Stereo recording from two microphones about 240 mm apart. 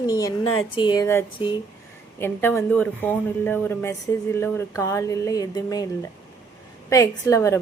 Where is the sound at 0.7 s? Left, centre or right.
Centre.